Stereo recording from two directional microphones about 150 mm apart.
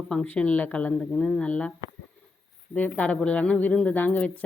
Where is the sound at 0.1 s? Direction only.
5° left (ahead or behind).